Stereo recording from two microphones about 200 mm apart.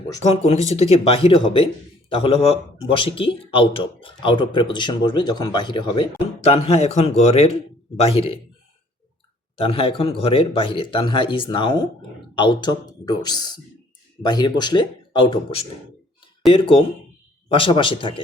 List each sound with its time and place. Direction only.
0.2 s a man's voice: 30° left (ahead or behind)
9.6 s a man's voice: 30° left (ahead or behind)